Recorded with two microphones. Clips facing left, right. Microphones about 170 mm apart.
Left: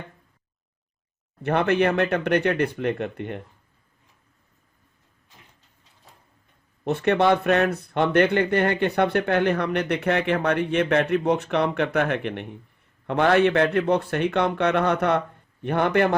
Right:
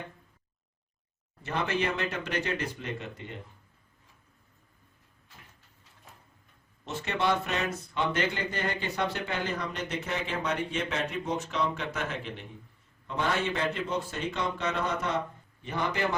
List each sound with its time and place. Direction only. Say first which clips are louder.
1.4 s speech: left 10 dB; 60° left (ahead or behind)
6.8 s speech: left 10 dB; 60° left (ahead or behind)